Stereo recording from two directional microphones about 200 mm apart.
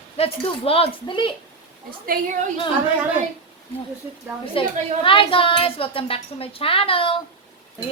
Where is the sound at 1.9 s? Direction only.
45° right (ahead or behind).